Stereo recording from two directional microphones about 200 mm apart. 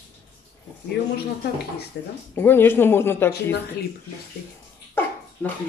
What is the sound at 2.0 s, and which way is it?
Speech, 55° left (ahead or behind).